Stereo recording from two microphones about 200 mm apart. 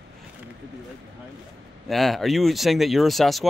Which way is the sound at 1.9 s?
Centre (ahead or behind).